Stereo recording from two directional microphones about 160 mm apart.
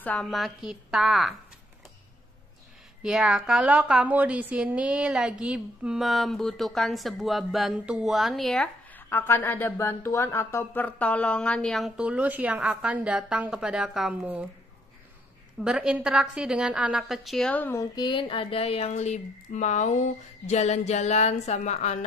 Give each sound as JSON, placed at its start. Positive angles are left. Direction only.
{"t": 0.0, "sound": "a woman's voice", "side_deg": 5}
{"t": 3.0, "sound": "a woman's voice", "side_deg": -5}
{"t": 9.1, "sound": "a woman's voice", "side_deg": 15}
{"t": 15.6, "sound": "a woman's voice", "side_deg": -5}
{"t": 17.9, "sound": "a sound", "side_deg": 30}